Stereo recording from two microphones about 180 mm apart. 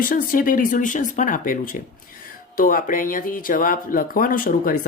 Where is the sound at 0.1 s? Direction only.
50° left (ahead or behind).